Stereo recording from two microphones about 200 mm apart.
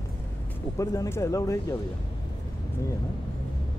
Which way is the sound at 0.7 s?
15° left (ahead or behind).